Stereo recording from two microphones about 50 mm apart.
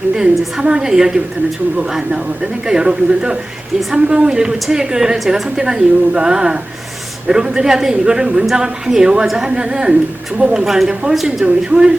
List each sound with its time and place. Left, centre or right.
0.2 s a woman's voice: centre
10.6 s a woman's voice: centre
11.4 s a woman's voice: centre